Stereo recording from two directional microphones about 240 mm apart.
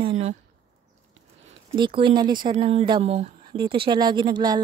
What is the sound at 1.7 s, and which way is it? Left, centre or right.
Speech, centre.